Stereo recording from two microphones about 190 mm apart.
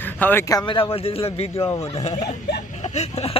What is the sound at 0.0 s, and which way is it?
Speech, 10° left (ahead or behind).